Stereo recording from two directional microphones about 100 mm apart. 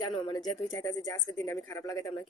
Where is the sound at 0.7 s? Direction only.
40° left (ahead or behind).